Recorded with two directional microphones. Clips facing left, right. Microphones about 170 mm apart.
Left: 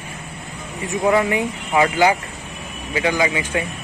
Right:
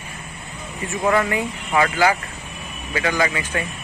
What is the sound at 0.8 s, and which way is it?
Speech, 15° left (ahead or behind).